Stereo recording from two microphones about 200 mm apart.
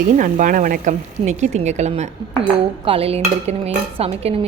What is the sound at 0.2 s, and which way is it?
Speech, 40° right (ahead or behind).